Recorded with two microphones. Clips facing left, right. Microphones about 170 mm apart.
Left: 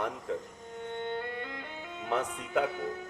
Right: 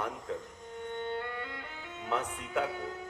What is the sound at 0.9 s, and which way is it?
Music, 25° left (ahead or behind).